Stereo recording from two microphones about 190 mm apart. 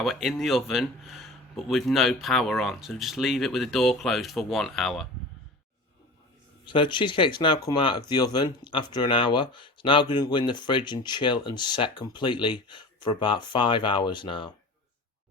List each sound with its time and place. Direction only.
0.0 s speech: centre (ahead or behind)
6.7 s speech: 25° left (ahead or behind)